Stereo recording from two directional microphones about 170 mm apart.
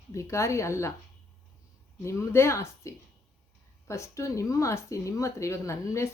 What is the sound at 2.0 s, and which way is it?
Speech, 15° left (ahead or behind).